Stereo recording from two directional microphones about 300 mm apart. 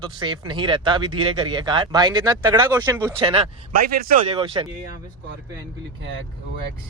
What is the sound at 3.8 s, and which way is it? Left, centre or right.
Speech, right.